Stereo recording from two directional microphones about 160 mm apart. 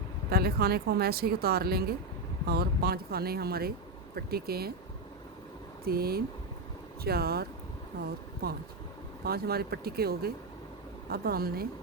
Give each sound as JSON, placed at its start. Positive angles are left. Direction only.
{"t": 0.3, "sound": "speech", "side_deg": -75}
{"t": 5.8, "sound": "speech", "side_deg": -75}
{"t": 9.2, "sound": "speech", "side_deg": -75}